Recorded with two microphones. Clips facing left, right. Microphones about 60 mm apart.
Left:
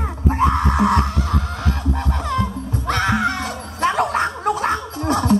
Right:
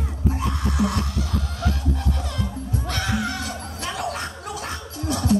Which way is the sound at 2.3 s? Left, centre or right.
Left.